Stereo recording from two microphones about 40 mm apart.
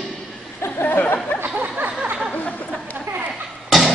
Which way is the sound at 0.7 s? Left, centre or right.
Left.